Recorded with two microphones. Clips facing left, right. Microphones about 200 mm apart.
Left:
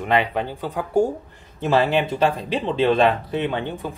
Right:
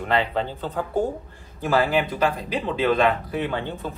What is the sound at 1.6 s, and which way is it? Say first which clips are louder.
Speech: left 2 dB; 25° left (ahead or behind).